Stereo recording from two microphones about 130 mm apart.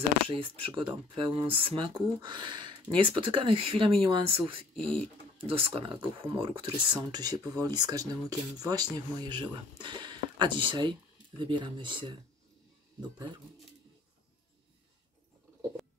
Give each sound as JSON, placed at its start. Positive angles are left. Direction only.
{"t": 0.3, "sound": "speech", "side_deg": -45}
{"t": 7.0, "sound": "speech", "side_deg": -30}